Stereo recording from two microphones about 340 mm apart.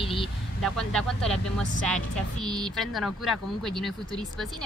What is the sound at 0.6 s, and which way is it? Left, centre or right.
Speech, centre.